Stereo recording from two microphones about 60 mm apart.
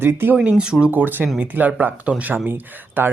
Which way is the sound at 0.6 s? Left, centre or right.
Centre.